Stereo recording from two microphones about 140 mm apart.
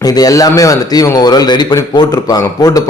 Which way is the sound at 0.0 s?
25° left (ahead or behind).